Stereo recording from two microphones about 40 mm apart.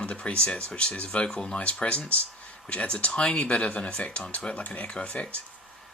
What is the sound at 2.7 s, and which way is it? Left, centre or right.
Speech, left.